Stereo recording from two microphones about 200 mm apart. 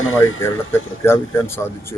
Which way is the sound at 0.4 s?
10° left (ahead or behind).